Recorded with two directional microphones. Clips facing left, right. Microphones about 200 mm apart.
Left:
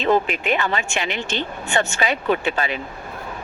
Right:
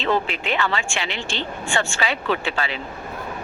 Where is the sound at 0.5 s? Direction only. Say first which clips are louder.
Left 1 dB; 20° left (ahead or behind).